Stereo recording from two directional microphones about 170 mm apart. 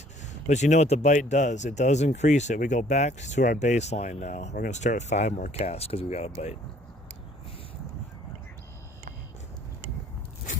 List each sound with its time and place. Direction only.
0.4 s speech: 45° left (ahead or behind)